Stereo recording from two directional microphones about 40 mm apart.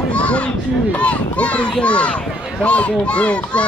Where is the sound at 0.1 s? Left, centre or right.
Left.